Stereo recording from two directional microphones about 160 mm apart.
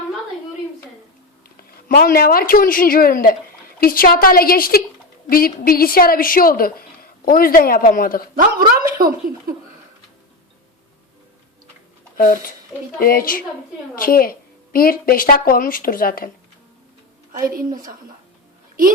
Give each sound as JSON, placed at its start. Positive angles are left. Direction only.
{"t": 1.5, "sound": "a woman's voice", "side_deg": 65}
{"t": 8.4, "sound": "a woman's voice", "side_deg": -65}
{"t": 12.1, "sound": "a woman's voice", "side_deg": 60}
{"t": 17.4, "sound": "a woman's voice", "side_deg": -65}